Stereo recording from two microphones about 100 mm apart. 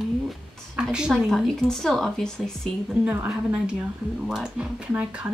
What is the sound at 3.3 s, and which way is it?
Speech, 10° right (ahead or behind).